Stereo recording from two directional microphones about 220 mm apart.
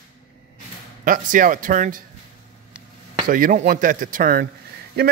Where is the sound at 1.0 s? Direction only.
35° right (ahead or behind).